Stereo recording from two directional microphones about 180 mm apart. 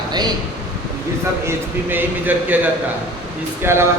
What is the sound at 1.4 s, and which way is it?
A man's voice, 10° right (ahead or behind).